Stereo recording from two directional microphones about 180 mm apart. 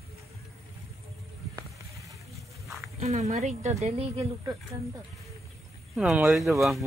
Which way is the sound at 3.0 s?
40° right (ahead or behind).